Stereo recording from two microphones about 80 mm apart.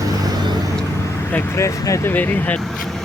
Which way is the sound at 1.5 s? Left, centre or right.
Left.